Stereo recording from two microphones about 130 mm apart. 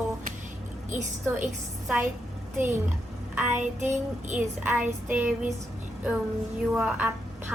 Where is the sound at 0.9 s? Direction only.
70° right (ahead or behind).